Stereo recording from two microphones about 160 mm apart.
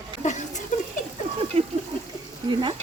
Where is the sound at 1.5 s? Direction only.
35° right (ahead or behind).